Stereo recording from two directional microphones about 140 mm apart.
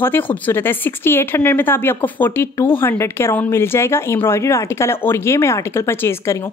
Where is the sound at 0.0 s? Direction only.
15° left (ahead or behind).